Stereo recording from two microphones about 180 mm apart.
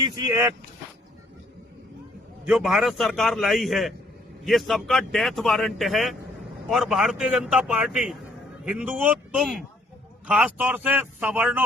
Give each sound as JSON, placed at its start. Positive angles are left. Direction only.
{"t": 0.0, "sound": "speech", "side_deg": -20}
{"t": 2.5, "sound": "a man's voice", "side_deg": -5}